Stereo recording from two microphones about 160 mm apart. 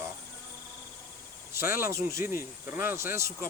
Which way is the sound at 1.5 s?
15° right (ahead or behind).